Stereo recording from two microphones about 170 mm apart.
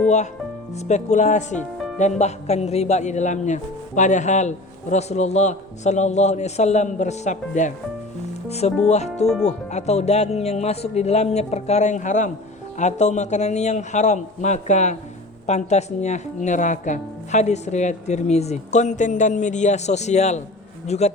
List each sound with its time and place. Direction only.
0.8 s speech: 45° left (ahead or behind)
9.2 s speech: 5° left (ahead or behind)
9.5 s speech: 40° left (ahead or behind)